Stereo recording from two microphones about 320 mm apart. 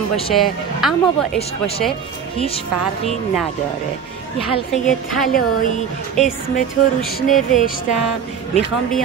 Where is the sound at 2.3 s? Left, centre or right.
Centre.